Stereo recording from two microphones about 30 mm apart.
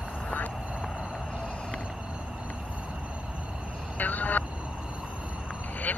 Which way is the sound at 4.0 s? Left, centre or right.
Left.